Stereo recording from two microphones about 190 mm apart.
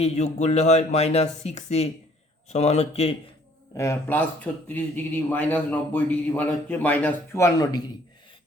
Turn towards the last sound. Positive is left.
turn(degrees=20)  # may be behind; listen again after turning